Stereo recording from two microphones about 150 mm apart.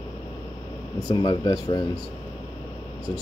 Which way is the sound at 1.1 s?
30° left (ahead or behind).